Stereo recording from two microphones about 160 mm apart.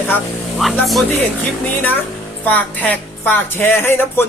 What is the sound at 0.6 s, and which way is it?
Speech, centre (ahead or behind).